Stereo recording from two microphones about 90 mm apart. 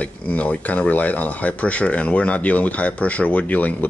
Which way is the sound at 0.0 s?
15° left (ahead or behind).